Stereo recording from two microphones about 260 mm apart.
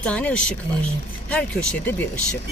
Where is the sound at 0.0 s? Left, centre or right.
Centre.